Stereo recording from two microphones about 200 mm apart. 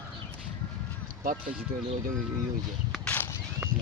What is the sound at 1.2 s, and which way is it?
Speech, 40° right (ahead or behind).